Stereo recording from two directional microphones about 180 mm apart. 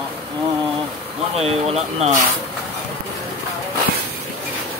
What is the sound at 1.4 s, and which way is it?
Speech, 35° right (ahead or behind).